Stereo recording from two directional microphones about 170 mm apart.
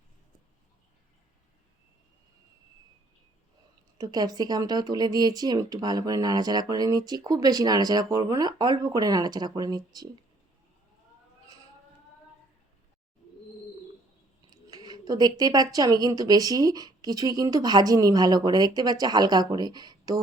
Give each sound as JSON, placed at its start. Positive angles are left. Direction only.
{"t": 3.9, "sound": "speech", "side_deg": -25}
{"t": 14.5, "sound": "speech", "side_deg": -25}